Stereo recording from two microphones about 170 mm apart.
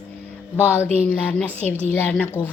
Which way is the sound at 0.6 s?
10° left (ahead or behind).